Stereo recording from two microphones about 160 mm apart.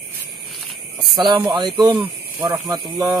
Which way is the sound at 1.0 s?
30° right (ahead or behind).